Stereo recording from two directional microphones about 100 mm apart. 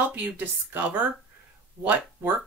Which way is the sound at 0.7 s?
15° right (ahead or behind).